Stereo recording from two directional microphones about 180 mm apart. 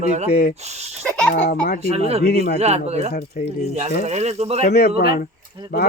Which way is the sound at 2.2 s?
60° left (ahead or behind).